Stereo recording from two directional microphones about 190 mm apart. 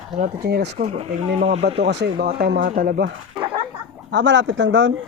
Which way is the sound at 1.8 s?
65° right (ahead or behind).